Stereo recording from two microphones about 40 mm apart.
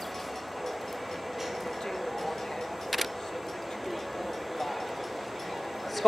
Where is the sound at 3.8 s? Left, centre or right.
Centre.